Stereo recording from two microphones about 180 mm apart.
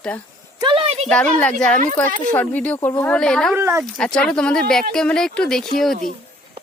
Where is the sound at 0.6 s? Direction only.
30° right (ahead or behind).